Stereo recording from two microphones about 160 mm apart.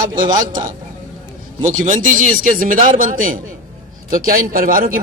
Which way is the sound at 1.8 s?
55° right (ahead or behind).